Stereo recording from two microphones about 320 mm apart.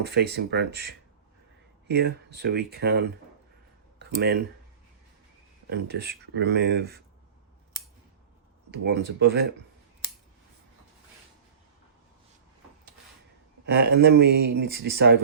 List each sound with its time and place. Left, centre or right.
0.0 s speech: right
3.9 s a sound: right
5.6 s speech: right
8.7 s speech: right
13.7 s speech: right